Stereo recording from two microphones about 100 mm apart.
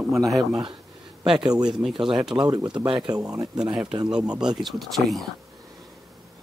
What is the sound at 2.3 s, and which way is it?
Speech, 45° right (ahead or behind).